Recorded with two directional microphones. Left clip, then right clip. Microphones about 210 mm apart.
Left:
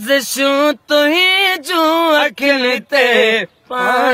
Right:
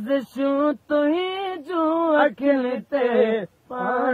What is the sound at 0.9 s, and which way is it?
Speech, 20° left (ahead or behind).